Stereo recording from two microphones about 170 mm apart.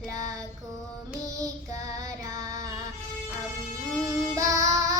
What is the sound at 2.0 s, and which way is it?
Music, 20° right (ahead or behind).